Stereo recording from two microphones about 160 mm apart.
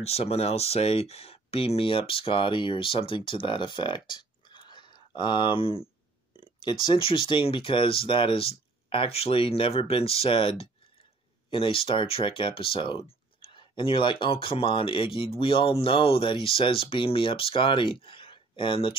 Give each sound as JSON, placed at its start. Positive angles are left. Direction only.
{"t": 0.0, "sound": "speech", "side_deg": 40}